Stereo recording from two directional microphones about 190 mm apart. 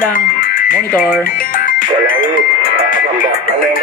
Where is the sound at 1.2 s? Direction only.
50° left (ahead or behind).